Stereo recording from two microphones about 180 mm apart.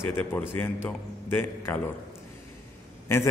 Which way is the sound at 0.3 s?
10° left (ahead or behind).